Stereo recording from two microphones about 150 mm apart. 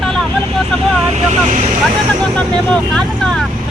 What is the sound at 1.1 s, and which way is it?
Vehicle, 50° right (ahead or behind).